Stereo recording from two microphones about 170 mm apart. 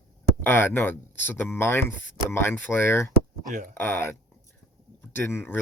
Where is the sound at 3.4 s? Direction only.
50° right (ahead or behind).